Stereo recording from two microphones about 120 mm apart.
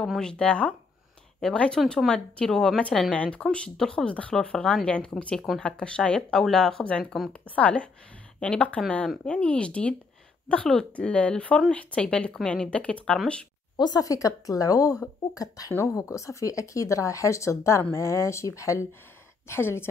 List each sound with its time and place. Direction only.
0.0 s speech: 5° left (ahead or behind)
13.7 s speech: 35° left (ahead or behind)